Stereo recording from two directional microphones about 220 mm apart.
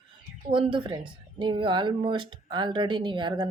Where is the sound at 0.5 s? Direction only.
25° right (ahead or behind).